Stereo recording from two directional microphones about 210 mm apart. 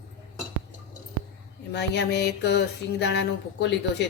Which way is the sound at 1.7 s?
55° left (ahead or behind).